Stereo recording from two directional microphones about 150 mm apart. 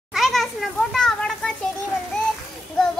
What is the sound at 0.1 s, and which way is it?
Children playing, centre (ahead or behind).